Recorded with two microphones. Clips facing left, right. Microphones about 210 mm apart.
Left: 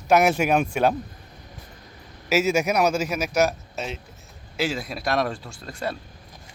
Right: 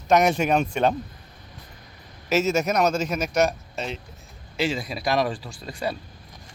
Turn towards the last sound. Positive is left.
turn(degrees=0)  # may be behind; listen again after turning